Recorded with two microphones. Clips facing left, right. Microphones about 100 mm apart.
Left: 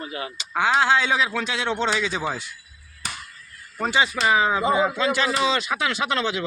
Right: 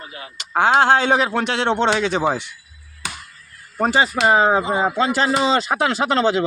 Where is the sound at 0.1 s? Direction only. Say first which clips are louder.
Left 5 dB; 90° left.